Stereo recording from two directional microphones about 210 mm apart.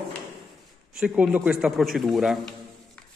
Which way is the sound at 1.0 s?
Centre (ahead or behind).